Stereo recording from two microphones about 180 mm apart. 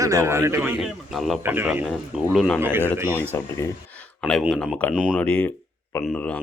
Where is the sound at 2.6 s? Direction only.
10° right (ahead or behind).